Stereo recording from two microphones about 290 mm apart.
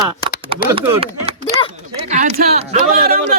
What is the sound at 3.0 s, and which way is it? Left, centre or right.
Speech, right.